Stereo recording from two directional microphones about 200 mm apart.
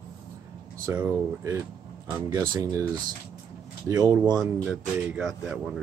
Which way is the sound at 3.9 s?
20° right (ahead or behind).